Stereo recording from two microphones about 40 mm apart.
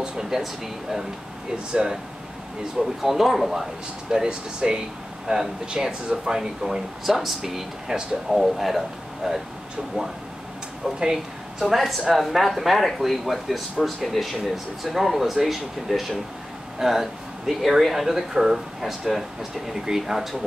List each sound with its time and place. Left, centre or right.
0.0 s air conditioning: centre
2.8 s speech: centre
4.1 s speech: centre
7.1 s speech: centre
11.6 s speech: centre